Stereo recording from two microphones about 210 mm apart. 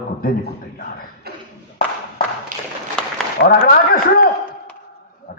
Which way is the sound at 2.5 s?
40° right (ahead or behind).